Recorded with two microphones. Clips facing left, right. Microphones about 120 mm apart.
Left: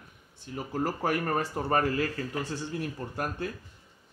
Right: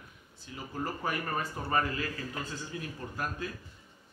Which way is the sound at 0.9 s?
70° left (ahead or behind).